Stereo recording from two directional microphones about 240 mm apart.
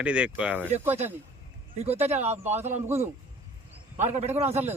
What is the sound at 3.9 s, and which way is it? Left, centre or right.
Speech, right.